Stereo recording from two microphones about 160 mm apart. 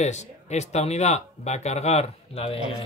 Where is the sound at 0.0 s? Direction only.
45° left (ahead or behind).